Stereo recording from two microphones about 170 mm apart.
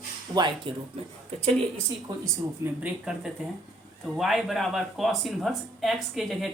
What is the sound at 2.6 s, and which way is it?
Speech, 5° right (ahead or behind).